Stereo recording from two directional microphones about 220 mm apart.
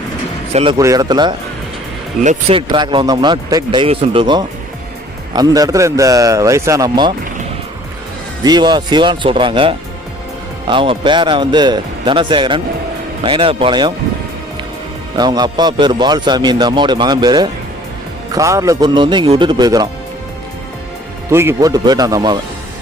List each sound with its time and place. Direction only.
0.5 s a man's voice: 25° right (ahead or behind)
0.8 s a man's voice: 15° right (ahead or behind)
8.4 s a man's voice: 20° right (ahead or behind)
15.1 s a man's voice: 20° right (ahead or behind)
21.2 s a man's voice: 10° right (ahead or behind)